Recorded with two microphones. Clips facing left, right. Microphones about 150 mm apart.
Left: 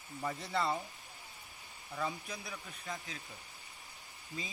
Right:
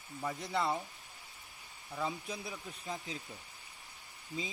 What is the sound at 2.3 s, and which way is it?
Speech, 25° right (ahead or behind).